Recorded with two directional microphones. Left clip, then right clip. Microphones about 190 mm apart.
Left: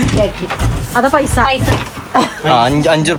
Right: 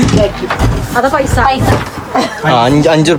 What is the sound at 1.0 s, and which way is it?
Speech, 45° left (ahead or behind).